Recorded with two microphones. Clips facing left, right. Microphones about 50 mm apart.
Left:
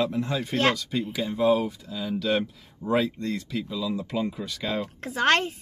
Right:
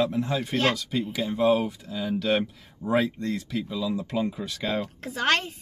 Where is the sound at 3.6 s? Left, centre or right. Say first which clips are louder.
Right 1 dB; right.